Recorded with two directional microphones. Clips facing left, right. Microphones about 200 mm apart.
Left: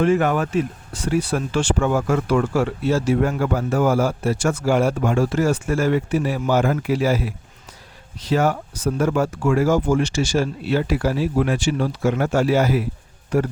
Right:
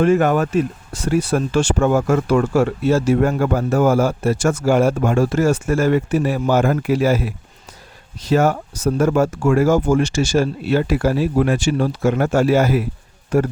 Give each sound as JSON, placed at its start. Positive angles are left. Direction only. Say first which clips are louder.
{"t": 0.0, "sound": "speech", "louder": "right 3 dB", "side_deg": -45}